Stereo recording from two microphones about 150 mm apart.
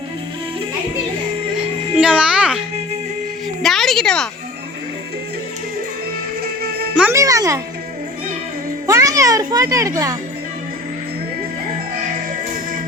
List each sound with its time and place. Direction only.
2.0 s music: 5° right (ahead or behind)
3.6 s a sound: centre (ahead or behind)
6.4 s music: 90° right
7.1 s music: 20° right (ahead or behind)
8.9 s a child's voice: 20° right (ahead or behind)